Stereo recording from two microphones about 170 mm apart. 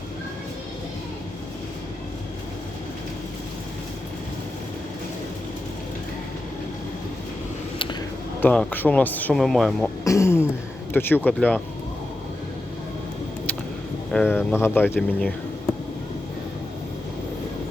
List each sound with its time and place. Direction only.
8.4 s speech: 10° left (ahead or behind)
10.0 s speech: 20° left (ahead or behind)
14.1 s speech: 5° left (ahead or behind)